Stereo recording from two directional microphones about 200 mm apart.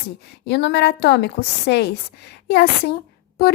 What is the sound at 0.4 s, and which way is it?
A woman's voice, 60° left (ahead or behind).